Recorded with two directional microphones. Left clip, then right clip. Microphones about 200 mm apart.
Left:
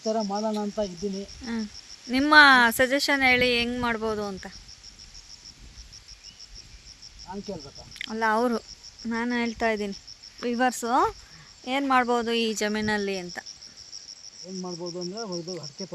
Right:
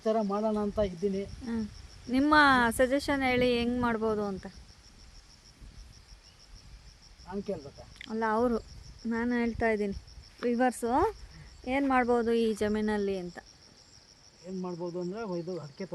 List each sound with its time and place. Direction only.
0.2 s speech: 5° right (ahead or behind)
7.3 s speech: 5° right (ahead or behind)
14.6 s cricket: 15° left (ahead or behind)
15.3 s speech: 5° left (ahead or behind)